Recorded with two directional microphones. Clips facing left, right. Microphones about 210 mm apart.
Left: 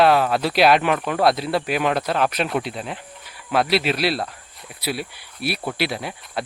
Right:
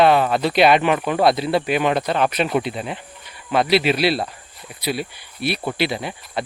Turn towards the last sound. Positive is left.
turn(degrees=0)  # may be behind; listen again after turning